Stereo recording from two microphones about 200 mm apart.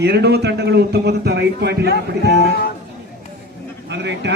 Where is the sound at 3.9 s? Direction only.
60° right (ahead or behind).